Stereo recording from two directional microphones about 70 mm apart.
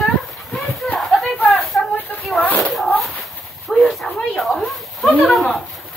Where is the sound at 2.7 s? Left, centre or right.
Centre.